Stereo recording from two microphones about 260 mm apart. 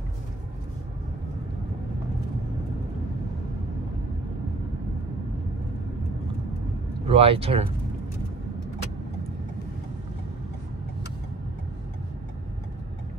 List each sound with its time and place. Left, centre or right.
7.1 s speech: right